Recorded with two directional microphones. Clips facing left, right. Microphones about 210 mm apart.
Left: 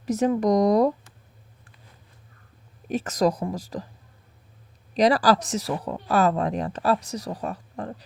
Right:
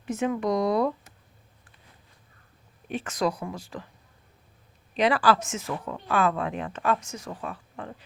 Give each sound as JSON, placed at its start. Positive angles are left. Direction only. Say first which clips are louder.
{"t": 0.0, "sound": "speech", "louder": "left 5 dB", "side_deg": 40}
{"t": 2.9, "sound": "speech", "louder": "left 5 dB", "side_deg": 40}
{"t": 4.9, "sound": "speech", "louder": "left 3 dB", "side_deg": 40}